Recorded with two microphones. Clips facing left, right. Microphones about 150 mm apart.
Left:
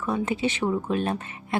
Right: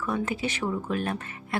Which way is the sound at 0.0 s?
25° left (ahead or behind).